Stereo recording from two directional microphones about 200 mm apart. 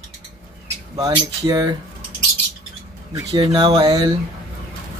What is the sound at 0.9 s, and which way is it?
Speech, 20° right (ahead or behind).